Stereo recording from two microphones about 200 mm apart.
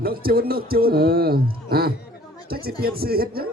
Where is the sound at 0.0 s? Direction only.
50° right (ahead or behind).